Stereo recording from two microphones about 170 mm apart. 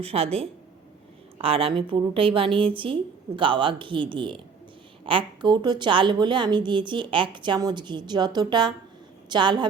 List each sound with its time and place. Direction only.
0.0 s a woman's voice: 35° right (ahead or behind)